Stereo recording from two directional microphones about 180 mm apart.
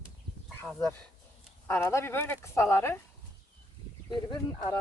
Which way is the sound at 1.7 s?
15° left (ahead or behind).